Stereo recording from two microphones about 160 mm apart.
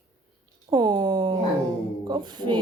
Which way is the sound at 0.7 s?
30° right (ahead or behind).